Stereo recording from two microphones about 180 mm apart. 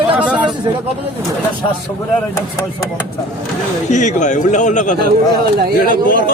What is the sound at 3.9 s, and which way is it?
A man's voice, 40° left (ahead or behind).